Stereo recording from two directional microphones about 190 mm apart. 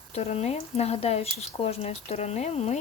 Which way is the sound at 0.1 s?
35° left (ahead or behind).